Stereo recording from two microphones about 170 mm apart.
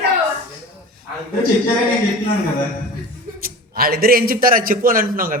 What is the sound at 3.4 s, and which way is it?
A woman's voice, 60° right (ahead or behind).